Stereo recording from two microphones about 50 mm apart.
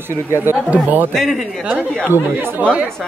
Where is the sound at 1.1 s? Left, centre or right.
Centre.